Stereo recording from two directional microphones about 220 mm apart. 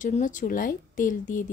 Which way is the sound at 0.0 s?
35° left (ahead or behind).